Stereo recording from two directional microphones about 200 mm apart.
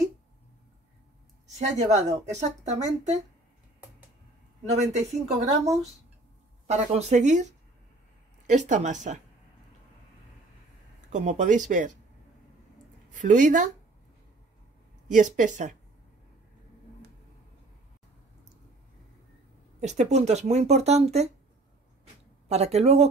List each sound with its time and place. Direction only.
1.8 s speech: 35° right (ahead or behind)
4.6 s speech: 35° right (ahead or behind)
6.7 s speech: 35° right (ahead or behind)
11.1 s speech: 35° right (ahead or behind)
13.1 s speech: 40° right (ahead or behind)
15.0 s speech: 40° right (ahead or behind)
19.8 s speech: 35° right (ahead or behind)
22.5 s speech: 35° right (ahead or behind)